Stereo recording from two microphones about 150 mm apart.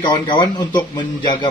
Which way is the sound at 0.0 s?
30° left (ahead or behind).